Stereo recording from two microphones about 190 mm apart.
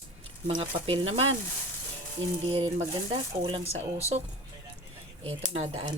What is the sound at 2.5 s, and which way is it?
Speech, 30° right (ahead or behind).